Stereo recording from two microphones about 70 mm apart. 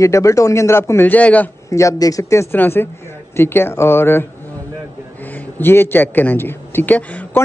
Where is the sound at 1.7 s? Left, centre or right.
Left.